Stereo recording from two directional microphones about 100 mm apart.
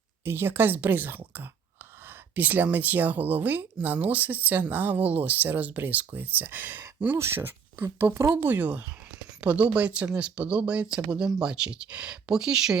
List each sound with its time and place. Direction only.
0.3 s speech: 25° right (ahead or behind); by 12.8 s 5° right (ahead or behind)